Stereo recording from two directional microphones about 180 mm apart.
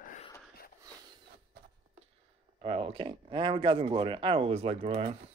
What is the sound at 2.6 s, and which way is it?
Speech, 30° right (ahead or behind).